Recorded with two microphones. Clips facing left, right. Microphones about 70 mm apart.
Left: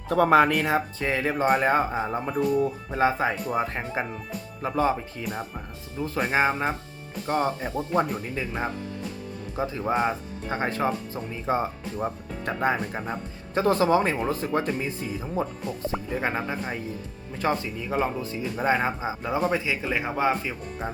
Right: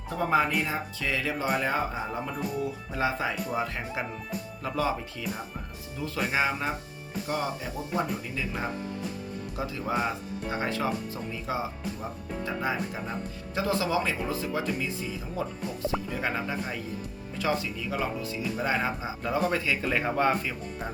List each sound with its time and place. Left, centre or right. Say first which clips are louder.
0.1 s speech: left 7 dB; left
0.9 s speech: left 5 dB; left
15.4 s speech: left 2 dB; left; by 20.6 s centre